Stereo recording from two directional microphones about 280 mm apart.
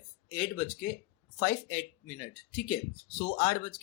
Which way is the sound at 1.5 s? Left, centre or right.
Left.